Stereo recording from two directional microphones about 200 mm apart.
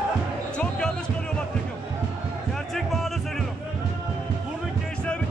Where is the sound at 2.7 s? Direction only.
Centre (ahead or behind).